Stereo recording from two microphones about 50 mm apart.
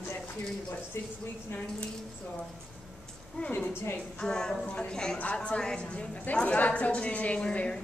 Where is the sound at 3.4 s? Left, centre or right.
Left.